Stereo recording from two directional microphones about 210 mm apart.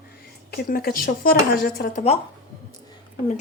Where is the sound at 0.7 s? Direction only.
45° left (ahead or behind).